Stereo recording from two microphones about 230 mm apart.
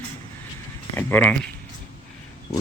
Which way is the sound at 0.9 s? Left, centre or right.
Centre.